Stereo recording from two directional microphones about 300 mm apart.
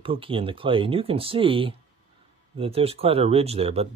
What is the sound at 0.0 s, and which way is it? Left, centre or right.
Speech, centre.